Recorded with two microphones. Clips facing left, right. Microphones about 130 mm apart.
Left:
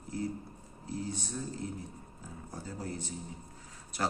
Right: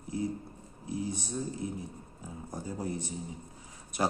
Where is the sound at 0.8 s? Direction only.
15° right (ahead or behind).